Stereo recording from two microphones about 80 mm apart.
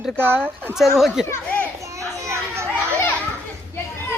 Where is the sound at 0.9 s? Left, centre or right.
Centre.